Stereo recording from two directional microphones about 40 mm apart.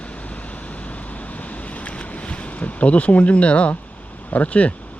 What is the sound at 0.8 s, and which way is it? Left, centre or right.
Wind, left.